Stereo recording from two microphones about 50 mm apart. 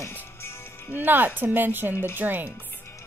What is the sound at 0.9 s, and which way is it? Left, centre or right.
A woman's voice, right.